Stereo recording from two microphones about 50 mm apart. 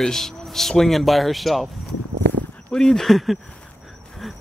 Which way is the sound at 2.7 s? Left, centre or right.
Centre.